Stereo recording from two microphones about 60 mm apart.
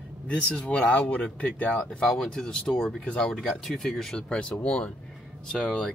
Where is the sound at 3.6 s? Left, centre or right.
Centre.